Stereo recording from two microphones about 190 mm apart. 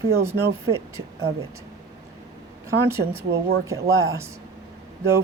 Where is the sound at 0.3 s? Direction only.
15° right (ahead or behind).